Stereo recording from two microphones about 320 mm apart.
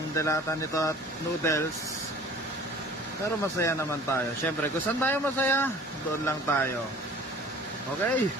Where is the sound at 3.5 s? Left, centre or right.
Centre.